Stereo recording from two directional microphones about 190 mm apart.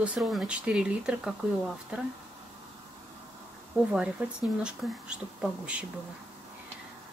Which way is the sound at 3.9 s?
5° right (ahead or behind).